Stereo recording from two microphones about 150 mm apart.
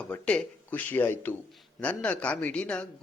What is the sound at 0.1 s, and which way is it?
Speech, 10° left (ahead or behind).